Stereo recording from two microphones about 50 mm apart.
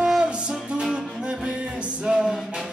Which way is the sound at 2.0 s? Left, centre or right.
Centre.